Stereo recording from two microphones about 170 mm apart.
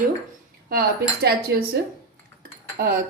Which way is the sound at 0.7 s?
60° right (ahead or behind).